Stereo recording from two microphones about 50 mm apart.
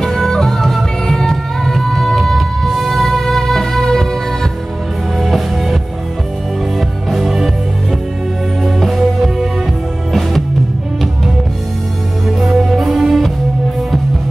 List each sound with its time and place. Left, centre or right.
0.0 s music: centre
5.2 s music: centre
7.1 s music: centre
8.6 s music: centre
12.3 s music: centre